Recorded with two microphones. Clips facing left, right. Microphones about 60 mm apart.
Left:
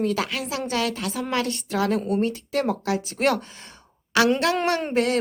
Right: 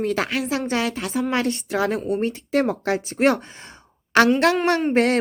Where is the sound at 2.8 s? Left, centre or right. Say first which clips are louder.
Right 2 dB; right.